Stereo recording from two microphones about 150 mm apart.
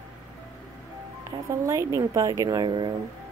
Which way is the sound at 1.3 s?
20° right (ahead or behind).